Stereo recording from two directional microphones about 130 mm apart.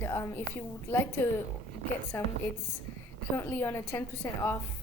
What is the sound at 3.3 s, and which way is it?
A woman's voice, 15° left (ahead or behind).